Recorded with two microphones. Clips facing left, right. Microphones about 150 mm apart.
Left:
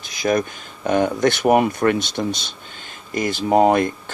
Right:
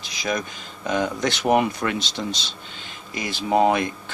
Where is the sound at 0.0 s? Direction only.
50° left (ahead or behind).